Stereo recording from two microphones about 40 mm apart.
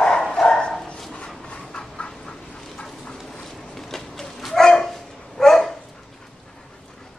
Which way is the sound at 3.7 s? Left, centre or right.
Centre.